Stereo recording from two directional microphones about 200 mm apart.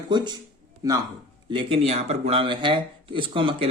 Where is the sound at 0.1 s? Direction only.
20° right (ahead or behind).